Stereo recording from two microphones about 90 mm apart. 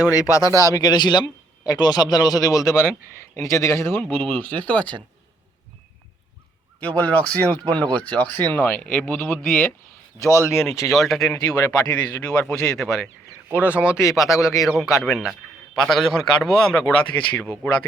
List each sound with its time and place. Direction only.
0.1 s speech: 40° left (ahead or behind)
4.0 s speech: 20° left (ahead or behind)
6.7 s speech: 15° left (ahead or behind)
9.2 s speech: 10° left (ahead or behind)
10.2 s speech: 40° left (ahead or behind)
10.9 s a man's voice: centre (ahead or behind)
11.3 s speech: 45° left (ahead or behind)
12.6 s a man's voice: 5° left (ahead or behind)
13.5 s a man's voice: 15° right (ahead or behind)
14.0 s a man's voice: 5° right (ahead or behind)